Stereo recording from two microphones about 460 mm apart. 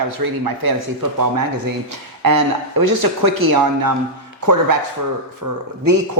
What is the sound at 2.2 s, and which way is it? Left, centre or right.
A man's voice, right.